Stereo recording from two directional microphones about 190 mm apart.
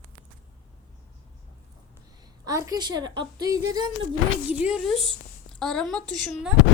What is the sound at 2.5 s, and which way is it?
A woman's voice, 20° right (ahead or behind).